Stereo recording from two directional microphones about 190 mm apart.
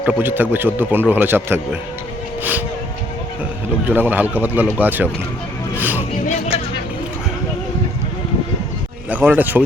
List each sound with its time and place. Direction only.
0.0 s a man's voice: 10° right (ahead or behind)
3.8 s a man's voice: 10° right (ahead or behind)
5.7 s music: 10° right (ahead or behind)
9.0 s a man's voice: 10° right (ahead or behind)